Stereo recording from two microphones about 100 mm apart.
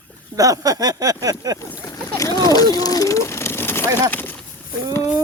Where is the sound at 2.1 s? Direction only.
35° left (ahead or behind); by 4.4 s 20° left (ahead or behind).